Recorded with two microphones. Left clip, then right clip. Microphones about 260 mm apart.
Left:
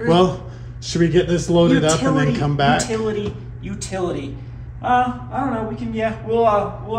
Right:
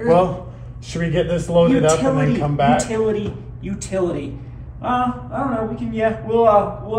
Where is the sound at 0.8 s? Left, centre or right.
Left.